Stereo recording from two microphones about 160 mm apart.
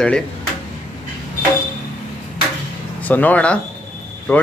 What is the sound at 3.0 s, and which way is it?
Speech, 10° left (ahead or behind).